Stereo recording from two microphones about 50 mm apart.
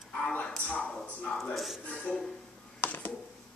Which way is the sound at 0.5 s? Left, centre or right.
Left.